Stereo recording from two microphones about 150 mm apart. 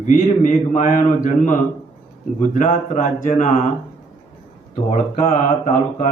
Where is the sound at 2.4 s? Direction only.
55° left (ahead or behind).